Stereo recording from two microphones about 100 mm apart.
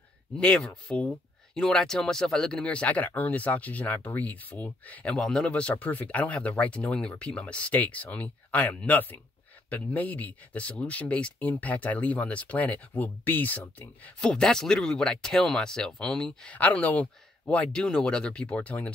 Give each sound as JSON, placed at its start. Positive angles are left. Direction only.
{"t": 0.4, "sound": "speech", "side_deg": 10}